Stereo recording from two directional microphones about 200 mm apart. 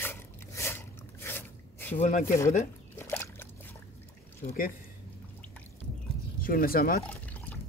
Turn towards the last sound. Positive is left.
turn(degrees=10)  # may be behind; listen again after turning